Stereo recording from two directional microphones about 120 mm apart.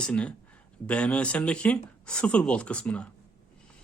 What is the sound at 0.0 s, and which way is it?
A man's voice, 10° left (ahead or behind).